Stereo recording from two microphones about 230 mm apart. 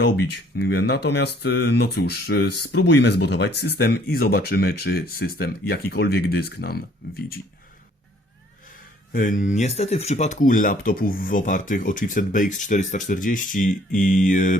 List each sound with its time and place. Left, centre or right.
0.5 s speech: left
9.1 s speech: left